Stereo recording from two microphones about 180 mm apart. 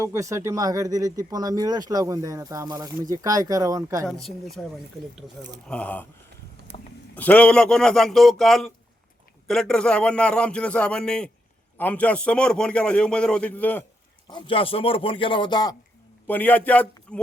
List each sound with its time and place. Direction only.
0.0 s speech: 15° right (ahead or behind)
4.0 s a man's voice: centre (ahead or behind)
6.7 s a sound: 35° left (ahead or behind)
7.2 s a man's voice: 10° left (ahead or behind)
14.3 s speech: 25° left (ahead or behind)
16.2 s a man's voice: 10° left (ahead or behind)